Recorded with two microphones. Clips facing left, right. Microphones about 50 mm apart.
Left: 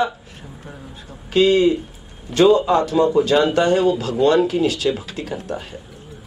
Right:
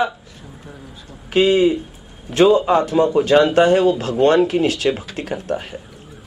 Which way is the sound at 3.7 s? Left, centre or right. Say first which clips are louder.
Right 2 dB; right.